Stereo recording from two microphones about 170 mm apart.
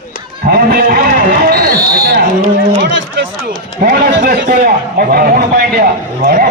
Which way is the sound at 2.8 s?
90° right.